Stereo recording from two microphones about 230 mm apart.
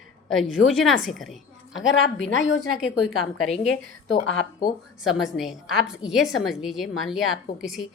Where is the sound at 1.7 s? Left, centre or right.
Left.